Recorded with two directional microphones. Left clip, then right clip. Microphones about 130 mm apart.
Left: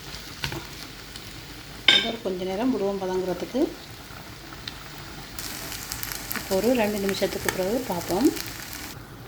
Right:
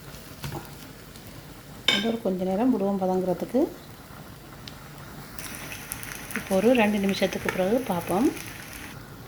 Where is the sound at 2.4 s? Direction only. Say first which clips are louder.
Even; 20° right (ahead or behind).